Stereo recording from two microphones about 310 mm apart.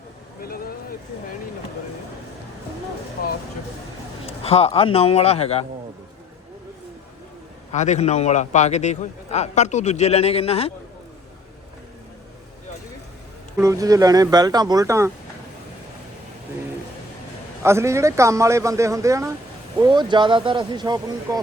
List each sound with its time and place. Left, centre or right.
0.4 s a sound: left
4.3 s a man's voice: centre
7.7 s a man's voice: left
13.6 s speech: centre
17.6 s speech: centre